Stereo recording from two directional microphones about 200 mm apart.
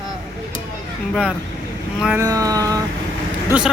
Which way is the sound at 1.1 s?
Centre (ahead or behind).